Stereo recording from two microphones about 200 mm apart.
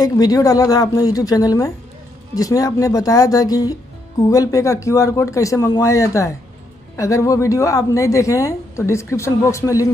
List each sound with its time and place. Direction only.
0.0 s a woman's voice: 20° left (ahead or behind)